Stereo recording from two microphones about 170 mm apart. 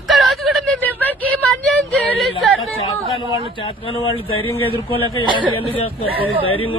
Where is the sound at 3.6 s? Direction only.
30° left (ahead or behind).